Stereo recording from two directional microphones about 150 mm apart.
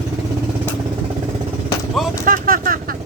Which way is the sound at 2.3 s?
70° right (ahead or behind).